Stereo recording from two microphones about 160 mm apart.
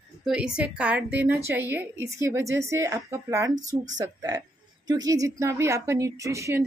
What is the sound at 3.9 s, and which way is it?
A woman's voice, 20° right (ahead or behind).